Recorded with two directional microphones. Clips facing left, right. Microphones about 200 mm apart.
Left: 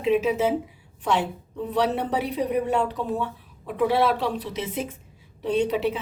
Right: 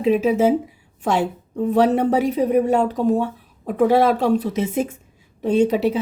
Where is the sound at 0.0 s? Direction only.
40° right (ahead or behind).